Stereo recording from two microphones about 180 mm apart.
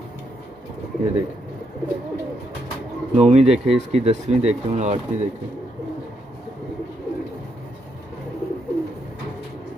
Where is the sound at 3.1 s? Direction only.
35° right (ahead or behind).